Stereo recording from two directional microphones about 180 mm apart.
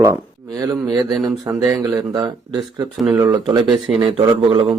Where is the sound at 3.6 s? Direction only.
Centre (ahead or behind).